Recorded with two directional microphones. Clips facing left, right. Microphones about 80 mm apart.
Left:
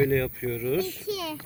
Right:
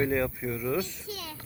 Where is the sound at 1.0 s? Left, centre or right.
Left.